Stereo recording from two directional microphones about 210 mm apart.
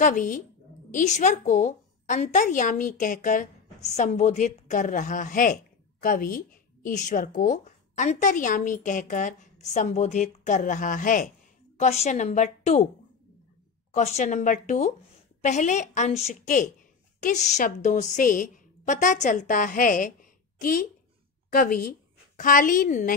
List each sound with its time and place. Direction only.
0.0 s a woman's voice: 40° left (ahead or behind)
13.9 s a woman's voice: 35° left (ahead or behind)